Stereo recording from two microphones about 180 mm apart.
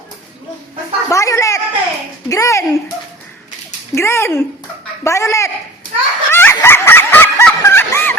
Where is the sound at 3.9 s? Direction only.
15° left (ahead or behind).